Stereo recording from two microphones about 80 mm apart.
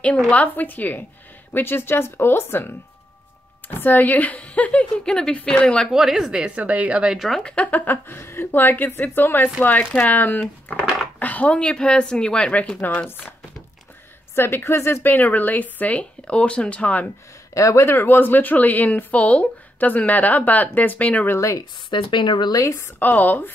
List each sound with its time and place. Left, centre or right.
0.3 s a woman's voice: left
5.9 s speech: centre
7.5 s a woman's voice: centre
14.3 s a woman's voice: left
17.6 s a woman's voice: left; by 21.3 s centre
21.3 s speech: left
21.9 s speech: left
22.6 s speech: left
22.9 s a woman's voice: left